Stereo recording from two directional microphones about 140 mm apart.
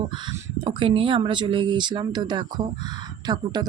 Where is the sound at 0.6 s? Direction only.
35° right (ahead or behind).